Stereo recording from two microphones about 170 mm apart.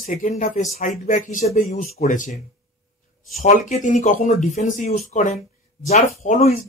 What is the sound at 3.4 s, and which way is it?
Speech, 50° left (ahead or behind).